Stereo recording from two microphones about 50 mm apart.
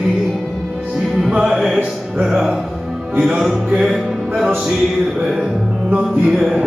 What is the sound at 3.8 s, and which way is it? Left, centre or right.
Music, centre.